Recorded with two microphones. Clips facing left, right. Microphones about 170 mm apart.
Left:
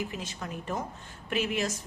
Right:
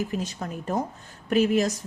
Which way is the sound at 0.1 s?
40° right (ahead or behind).